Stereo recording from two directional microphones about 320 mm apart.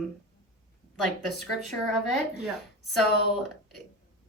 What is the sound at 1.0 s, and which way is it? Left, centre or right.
Speech, centre.